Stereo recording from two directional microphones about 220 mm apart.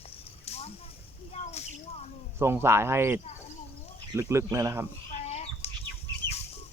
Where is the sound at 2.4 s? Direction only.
10° right (ahead or behind).